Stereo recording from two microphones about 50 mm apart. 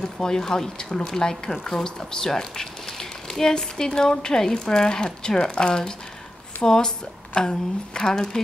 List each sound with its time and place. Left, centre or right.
0.0 s speech: centre